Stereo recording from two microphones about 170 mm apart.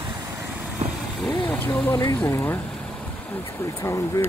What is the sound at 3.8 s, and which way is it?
Speech, 15° left (ahead or behind).